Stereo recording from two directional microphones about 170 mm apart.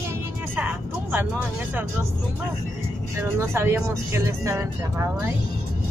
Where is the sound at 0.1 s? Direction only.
10° right (ahead or behind).